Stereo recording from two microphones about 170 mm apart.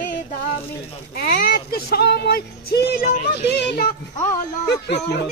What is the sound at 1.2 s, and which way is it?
Speech, 60° left (ahead or behind).